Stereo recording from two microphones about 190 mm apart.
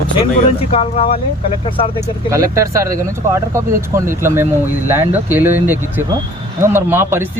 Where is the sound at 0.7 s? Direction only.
30° left (ahead or behind).